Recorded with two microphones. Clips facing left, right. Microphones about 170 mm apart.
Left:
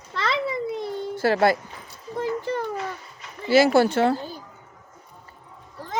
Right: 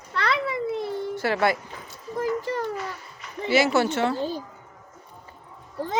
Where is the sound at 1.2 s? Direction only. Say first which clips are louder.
Left 4 dB; 35° left (ahead or behind).